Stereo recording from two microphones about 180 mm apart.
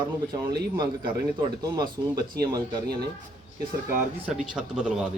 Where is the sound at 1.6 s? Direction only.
20° right (ahead or behind).